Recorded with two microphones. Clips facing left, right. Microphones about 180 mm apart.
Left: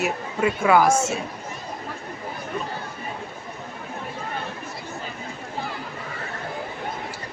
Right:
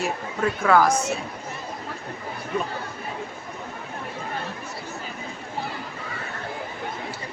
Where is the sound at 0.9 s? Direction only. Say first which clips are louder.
Left 3 dB; 25° left (ahead or behind).